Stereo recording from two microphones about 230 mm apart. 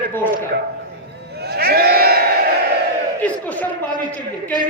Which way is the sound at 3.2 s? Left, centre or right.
Centre.